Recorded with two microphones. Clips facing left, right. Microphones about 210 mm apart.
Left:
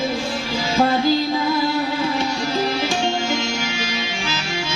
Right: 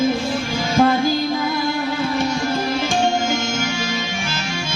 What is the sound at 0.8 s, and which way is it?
Music, 50° right (ahead or behind).